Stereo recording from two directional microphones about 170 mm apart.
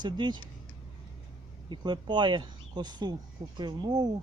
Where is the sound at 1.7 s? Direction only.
25° right (ahead or behind).